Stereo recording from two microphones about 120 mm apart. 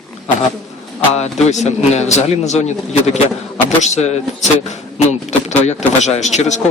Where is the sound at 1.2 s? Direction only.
65° left (ahead or behind).